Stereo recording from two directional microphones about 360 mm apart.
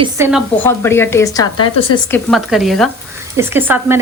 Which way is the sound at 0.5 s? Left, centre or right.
Centre.